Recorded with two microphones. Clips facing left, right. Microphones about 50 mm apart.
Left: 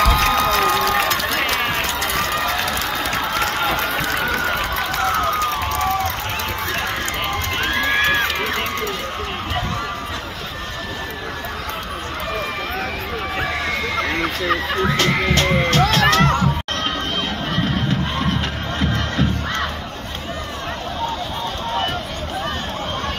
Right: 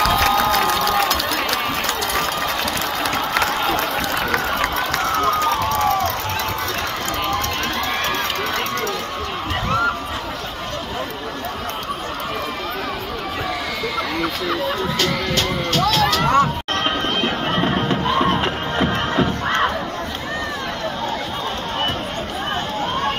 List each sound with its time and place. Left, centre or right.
0.1 s crowd: left
0.9 s run: left
7.6 s run: left
13.9 s a sound: left
15.0 s music: left
16.8 s music: right
18.4 s music: centre